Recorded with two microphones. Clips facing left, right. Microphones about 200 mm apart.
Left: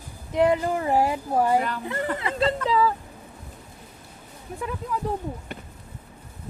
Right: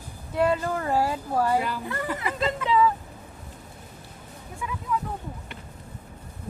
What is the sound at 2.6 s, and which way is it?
Speech, 35° left (ahead or behind).